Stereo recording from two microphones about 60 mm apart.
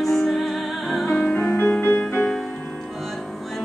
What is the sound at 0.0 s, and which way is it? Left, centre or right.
Music, centre.